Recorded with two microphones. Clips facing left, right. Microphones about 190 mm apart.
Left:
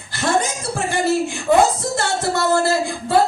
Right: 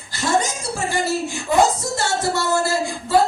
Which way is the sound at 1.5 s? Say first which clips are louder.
Left 3 dB; 50° left (ahead or behind).